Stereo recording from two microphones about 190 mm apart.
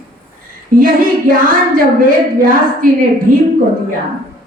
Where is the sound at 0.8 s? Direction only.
50° right (ahead or behind).